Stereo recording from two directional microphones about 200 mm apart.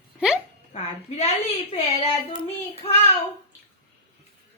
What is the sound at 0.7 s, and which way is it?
Speech, 35° left (ahead or behind).